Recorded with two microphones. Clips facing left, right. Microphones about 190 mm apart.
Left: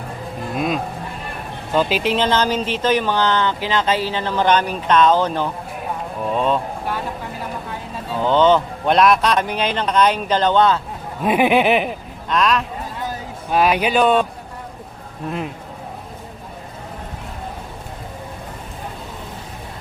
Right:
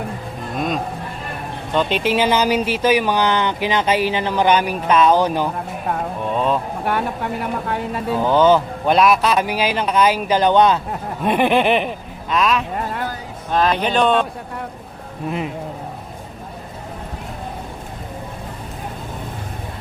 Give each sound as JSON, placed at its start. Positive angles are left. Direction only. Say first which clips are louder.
{"t": 0.5, "sound": "speech", "louder": "even", "side_deg": 5}
{"t": 6.2, "sound": "speech", "louder": "left 1 dB", "side_deg": 0}
{"t": 6.8, "sound": "speech", "louder": "right 4 dB", "side_deg": -65}
{"t": 8.2, "sound": "speech", "louder": "even", "side_deg": -10}
{"t": 11.2, "sound": "speech", "louder": "left 1 dB", "side_deg": 5}
{"t": 12.7, "sound": "vehicle", "louder": "right 4 dB", "side_deg": -65}
{"t": 13.5, "sound": "speech", "louder": "left 1 dB", "side_deg": 10}
{"t": 15.2, "sound": "speech", "louder": "right 2 dB", "side_deg": -10}